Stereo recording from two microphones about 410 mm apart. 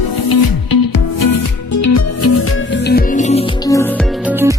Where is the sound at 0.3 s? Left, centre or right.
Left.